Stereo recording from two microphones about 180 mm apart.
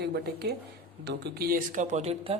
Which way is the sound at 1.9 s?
35° right (ahead or behind).